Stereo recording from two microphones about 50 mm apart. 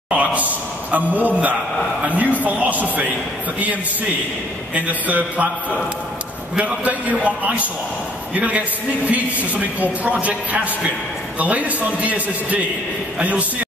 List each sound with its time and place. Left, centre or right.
0.1 s a man's voice: right
4.7 s a man's voice: right